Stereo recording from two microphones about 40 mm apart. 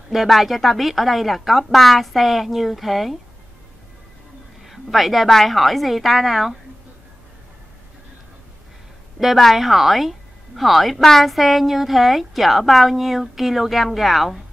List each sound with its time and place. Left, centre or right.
0.1 s speech: centre
4.6 s speech: centre
9.2 s speech: centre